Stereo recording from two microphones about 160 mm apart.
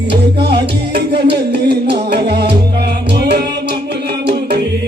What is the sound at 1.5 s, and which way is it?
Music, 90° right.